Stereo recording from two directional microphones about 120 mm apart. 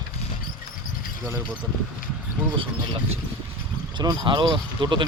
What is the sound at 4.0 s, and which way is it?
Speech, 35° right (ahead or behind).